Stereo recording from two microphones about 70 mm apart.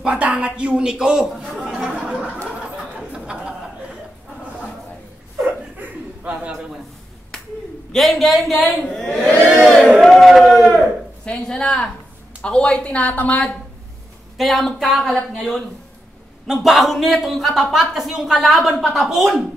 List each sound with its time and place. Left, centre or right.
0.0 s speech: centre
1.7 s a sound: centre
7.9 s a man's voice: centre
9.2 s speech: left
9.9 s a man's voice: centre
11.2 s speech: centre
14.3 s a man's voice: centre
16.4 s a man's voice: centre